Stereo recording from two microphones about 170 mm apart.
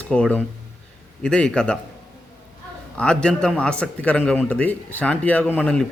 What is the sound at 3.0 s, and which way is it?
A man's voice, 5° left (ahead or behind).